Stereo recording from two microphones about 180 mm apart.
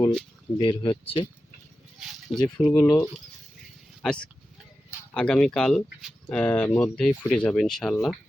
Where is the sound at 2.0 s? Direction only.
Centre (ahead or behind).